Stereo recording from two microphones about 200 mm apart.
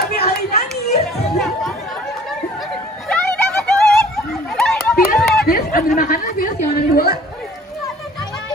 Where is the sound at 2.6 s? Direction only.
Centre (ahead or behind).